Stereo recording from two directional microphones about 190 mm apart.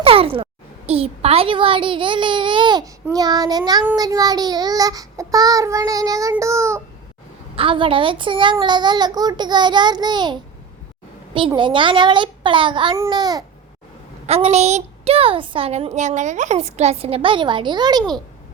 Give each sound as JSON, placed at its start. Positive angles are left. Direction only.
{"t": 0.0, "sound": "a child's voice", "side_deg": -30}
{"t": 7.5, "sound": "a child's voice", "side_deg": -30}
{"t": 11.3, "sound": "a child's voice", "side_deg": -25}
{"t": 14.3, "sound": "a woman's voice", "side_deg": -35}